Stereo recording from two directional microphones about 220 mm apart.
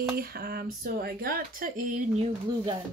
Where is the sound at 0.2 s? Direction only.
45° right (ahead or behind).